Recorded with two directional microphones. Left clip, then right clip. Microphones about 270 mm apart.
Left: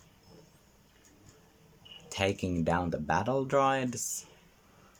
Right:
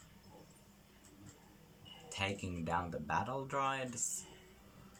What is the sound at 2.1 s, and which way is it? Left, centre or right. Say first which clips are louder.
Speech: left 9 dB; left.